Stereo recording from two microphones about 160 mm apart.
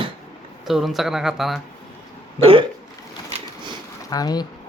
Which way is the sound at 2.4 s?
35° right (ahead or behind).